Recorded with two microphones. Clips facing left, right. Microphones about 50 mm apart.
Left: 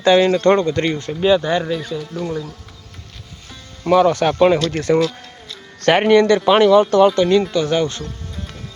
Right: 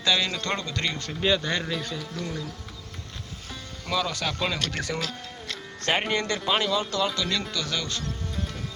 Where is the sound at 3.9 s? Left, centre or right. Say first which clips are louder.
Left 14 dB; left.